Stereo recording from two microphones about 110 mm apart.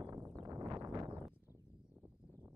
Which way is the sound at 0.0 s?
25° right (ahead or behind).